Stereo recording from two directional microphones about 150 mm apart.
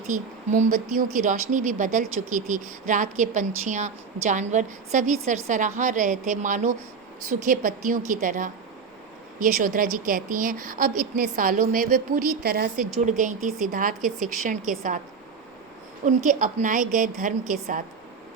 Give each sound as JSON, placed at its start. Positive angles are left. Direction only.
{"t": 0.1, "sound": "a woman's voice", "side_deg": -55}
{"t": 9.4, "sound": "a woman's voice", "side_deg": -70}
{"t": 13.1, "sound": "a woman's voice", "side_deg": -60}
{"t": 14.0, "sound": "a woman's voice", "side_deg": 0}
{"t": 14.4, "sound": "a woman's voice", "side_deg": -60}
{"t": 16.0, "sound": "a woman's voice", "side_deg": -60}